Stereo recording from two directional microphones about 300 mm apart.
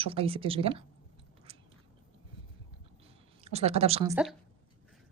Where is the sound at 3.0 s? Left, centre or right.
Centre.